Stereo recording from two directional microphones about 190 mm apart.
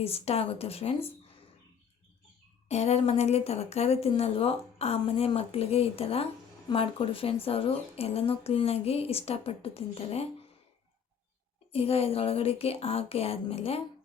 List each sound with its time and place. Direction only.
0.0 s speech: 30° left (ahead or behind)
2.6 s speech: 35° left (ahead or behind)
11.7 s speech: 30° left (ahead or behind)